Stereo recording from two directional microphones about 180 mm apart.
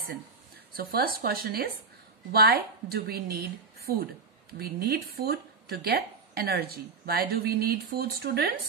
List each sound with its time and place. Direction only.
0.7 s speech: 55° right (ahead or behind)